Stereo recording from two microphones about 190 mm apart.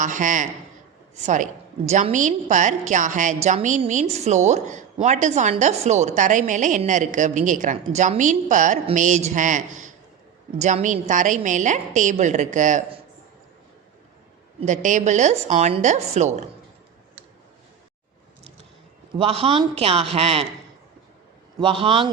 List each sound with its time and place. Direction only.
0.0 s a man's voice: 40° right (ahead or behind)
14.6 s a woman's voice: 40° right (ahead or behind)
19.1 s a woman's voice: 30° right (ahead or behind)
21.6 s a man's voice: 30° right (ahead or behind)